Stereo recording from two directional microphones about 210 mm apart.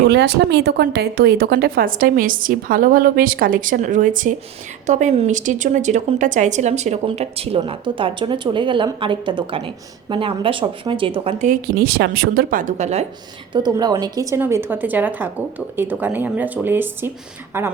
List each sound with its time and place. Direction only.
0.1 s a woman's voice: 55° right (ahead or behind); by 13.1 s 30° right (ahead or behind)
13.5 s a woman's voice: 20° right (ahead or behind)